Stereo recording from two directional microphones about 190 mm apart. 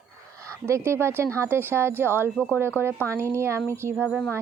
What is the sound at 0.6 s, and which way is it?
Speech, 15° right (ahead or behind).